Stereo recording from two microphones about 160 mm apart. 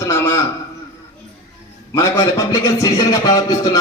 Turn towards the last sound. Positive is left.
turn(degrees=25)  # may be behind; listen again after turning